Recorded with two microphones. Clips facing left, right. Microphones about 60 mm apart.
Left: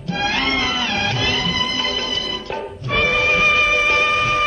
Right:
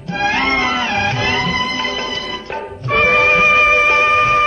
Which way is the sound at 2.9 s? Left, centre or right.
Right.